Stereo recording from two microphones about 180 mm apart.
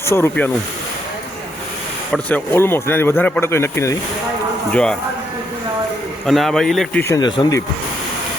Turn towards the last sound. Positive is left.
turn(degrees=20)  # may be behind; listen again after turning